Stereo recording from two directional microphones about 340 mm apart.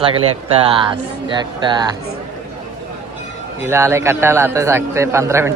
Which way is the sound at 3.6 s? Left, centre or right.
Centre.